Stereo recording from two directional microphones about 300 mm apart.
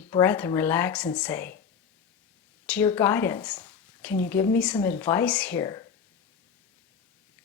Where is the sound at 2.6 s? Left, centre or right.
Centre.